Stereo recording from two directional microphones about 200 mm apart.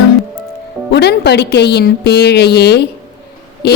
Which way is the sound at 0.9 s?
55° left (ahead or behind).